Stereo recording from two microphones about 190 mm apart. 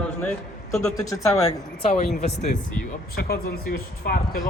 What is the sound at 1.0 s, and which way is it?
Speech, 15° left (ahead or behind).